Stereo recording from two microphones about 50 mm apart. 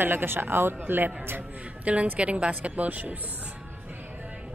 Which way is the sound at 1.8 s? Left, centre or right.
Right.